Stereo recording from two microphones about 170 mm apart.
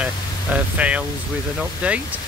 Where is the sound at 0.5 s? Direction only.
10° right (ahead or behind).